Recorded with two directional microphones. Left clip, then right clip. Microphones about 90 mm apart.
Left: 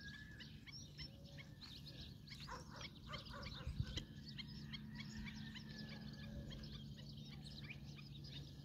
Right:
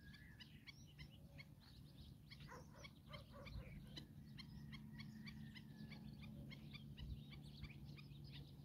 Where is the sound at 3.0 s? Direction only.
70° left (ahead or behind).